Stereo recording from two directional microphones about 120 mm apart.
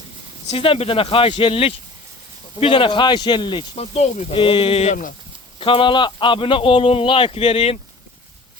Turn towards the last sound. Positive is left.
turn(degrees=60)  # may be behind; listen again after turning